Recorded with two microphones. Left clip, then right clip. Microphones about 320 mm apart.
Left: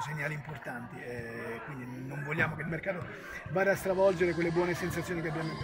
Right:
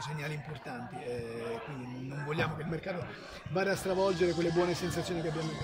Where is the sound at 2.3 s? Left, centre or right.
Centre.